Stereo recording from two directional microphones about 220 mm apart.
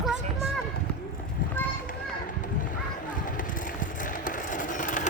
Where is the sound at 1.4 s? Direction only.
40° left (ahead or behind).